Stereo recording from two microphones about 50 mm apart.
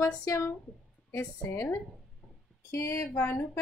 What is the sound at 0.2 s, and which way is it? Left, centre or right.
Speech, left.